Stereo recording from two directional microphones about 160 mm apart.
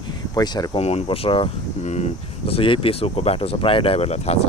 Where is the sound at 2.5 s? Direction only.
35° left (ahead or behind).